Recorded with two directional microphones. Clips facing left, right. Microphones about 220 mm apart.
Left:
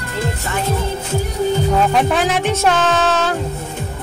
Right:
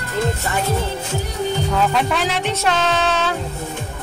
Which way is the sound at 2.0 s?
50° left (ahead or behind).